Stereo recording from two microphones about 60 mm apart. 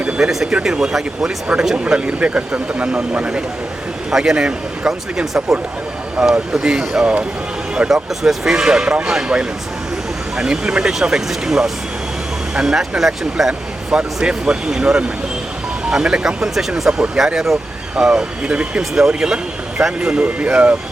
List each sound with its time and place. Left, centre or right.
0.2 s speech: centre
8.2 s speech: centre